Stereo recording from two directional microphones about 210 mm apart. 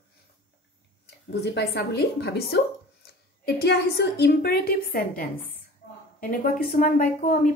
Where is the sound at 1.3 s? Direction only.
55° left (ahead or behind).